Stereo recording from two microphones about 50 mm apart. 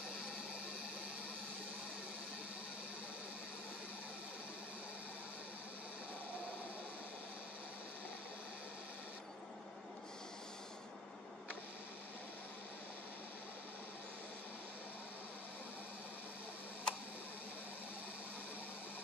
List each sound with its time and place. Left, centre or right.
16.9 s tick: left